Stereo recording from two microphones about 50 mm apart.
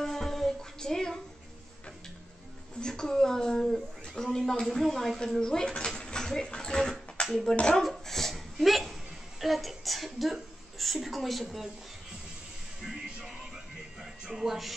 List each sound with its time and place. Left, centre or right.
0.0 s music: centre
2.8 s a sound: centre
4.1 s a woman's voice: centre
5.4 s dishes: centre
6.2 s a sound: centre
9.4 s a woman's voice: centre
12.8 s music: centre